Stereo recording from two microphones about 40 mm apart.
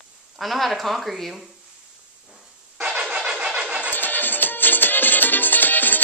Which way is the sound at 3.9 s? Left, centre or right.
Left.